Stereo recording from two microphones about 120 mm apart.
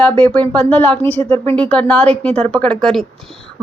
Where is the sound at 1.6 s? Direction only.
10° left (ahead or behind).